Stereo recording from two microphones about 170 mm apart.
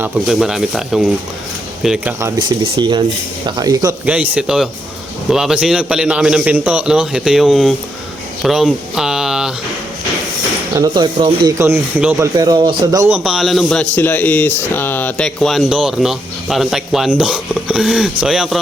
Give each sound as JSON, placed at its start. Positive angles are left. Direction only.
{"t": 0.3, "sound": "a man's voice", "side_deg": 0}
{"t": 2.4, "sound": "speech", "side_deg": -25}
{"t": 4.0, "sound": "a man's voice", "side_deg": -10}
{"t": 10.8, "sound": "speech", "side_deg": -25}
{"t": 12.2, "sound": "speech", "side_deg": -20}
{"t": 13.1, "sound": "a man's voice", "side_deg": -5}